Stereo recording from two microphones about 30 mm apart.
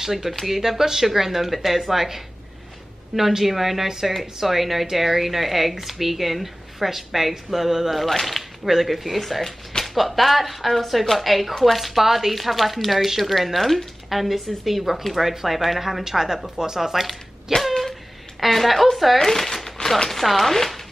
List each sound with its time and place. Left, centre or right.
0.0 s speech: centre
7.9 s speech: centre
8.4 s speech: centre
16.0 s speech: centre
17.5 s a sound: centre
18.4 s speech: centre
19.1 s speech: centre